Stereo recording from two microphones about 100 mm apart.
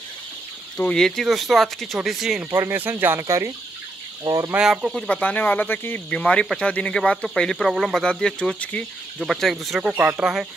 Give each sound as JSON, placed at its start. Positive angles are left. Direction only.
{"t": 0.8, "sound": "speech", "side_deg": 5}
{"t": 2.5, "sound": "speech", "side_deg": -25}
{"t": 4.2, "sound": "speech", "side_deg": -45}
{"t": 4.6, "sound": "speech", "side_deg": -10}
{"t": 4.9, "sound": "speech", "side_deg": 10}
{"t": 9.2, "sound": "speech", "side_deg": 0}